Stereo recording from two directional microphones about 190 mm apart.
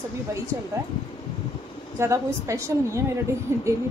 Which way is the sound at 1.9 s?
15° right (ahead or behind).